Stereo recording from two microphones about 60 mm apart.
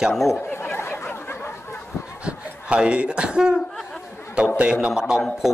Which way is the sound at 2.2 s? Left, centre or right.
Centre.